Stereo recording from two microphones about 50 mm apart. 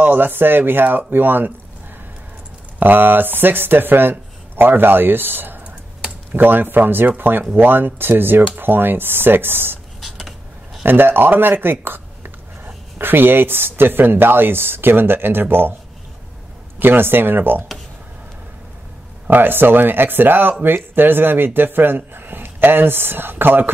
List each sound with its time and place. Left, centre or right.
0.0 s speech: right
2.8 s speech: right
9.9 s a sound: centre
10.8 s speech: right
16.8 s speech: right
19.2 s speech: right